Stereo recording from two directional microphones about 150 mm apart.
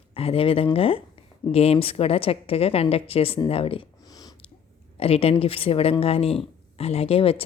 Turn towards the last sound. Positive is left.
turn(degrees=40)  # may be behind; listen again after turning